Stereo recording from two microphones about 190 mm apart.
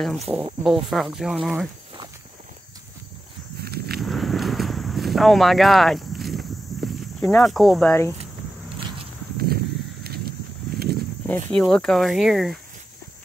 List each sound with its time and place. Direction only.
0.0 s speech: centre (ahead or behind)
3.6 s walk: 55° right (ahead or behind)
4.0 s a sound: centre (ahead or behind)
7.0 s speech: 5° left (ahead or behind)
10.7 s a sound: 55° right (ahead or behind)
11.2 s speech: 10° left (ahead or behind)